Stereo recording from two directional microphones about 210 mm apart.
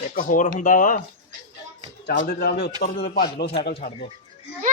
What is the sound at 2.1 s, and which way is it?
Speech, 45° left (ahead or behind).